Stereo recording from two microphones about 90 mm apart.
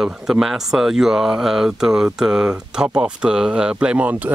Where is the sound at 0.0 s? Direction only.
5° right (ahead or behind).